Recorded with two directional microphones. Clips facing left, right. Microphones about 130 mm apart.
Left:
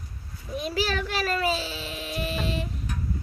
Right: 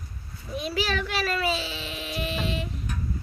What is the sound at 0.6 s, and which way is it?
A child's voice, 40° left (ahead or behind).